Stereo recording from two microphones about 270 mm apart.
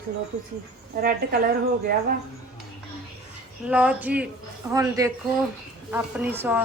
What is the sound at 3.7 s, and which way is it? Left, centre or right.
A woman's voice, centre.